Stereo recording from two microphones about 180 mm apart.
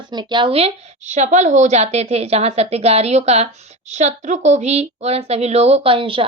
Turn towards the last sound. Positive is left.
turn(degrees=-30)  # may be behind; listen again after turning